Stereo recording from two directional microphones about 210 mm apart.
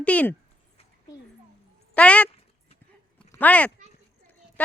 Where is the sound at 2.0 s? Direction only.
5° left (ahead or behind).